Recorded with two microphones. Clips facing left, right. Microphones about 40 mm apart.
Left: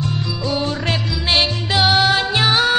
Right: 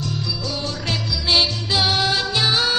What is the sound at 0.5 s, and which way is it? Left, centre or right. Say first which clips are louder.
Music: left 8 dB; left.